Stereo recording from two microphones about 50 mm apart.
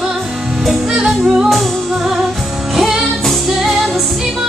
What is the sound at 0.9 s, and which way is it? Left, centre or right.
Music, centre.